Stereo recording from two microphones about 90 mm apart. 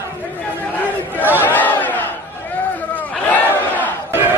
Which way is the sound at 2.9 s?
20° left (ahead or behind).